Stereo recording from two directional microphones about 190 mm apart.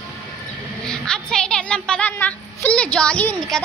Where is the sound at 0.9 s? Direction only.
5° left (ahead or behind).